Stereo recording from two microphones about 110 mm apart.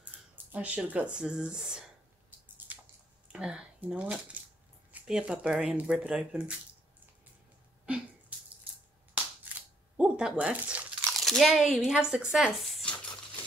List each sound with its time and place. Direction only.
0.0 s speech: 10° right (ahead or behind)
2.7 s a sound: 15° right (ahead or behind)
3.3 s speech: 5° right (ahead or behind)
9.9 s speech: 10° right (ahead or behind)
11.1 s speech: centre (ahead or behind)